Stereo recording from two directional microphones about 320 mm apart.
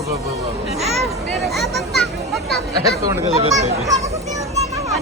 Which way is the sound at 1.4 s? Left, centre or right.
Centre.